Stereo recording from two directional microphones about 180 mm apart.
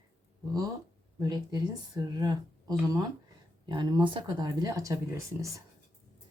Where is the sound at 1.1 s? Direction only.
20° right (ahead or behind).